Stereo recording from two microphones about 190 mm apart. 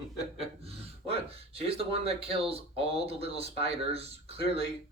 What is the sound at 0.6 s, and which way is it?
Speech, 30° right (ahead or behind).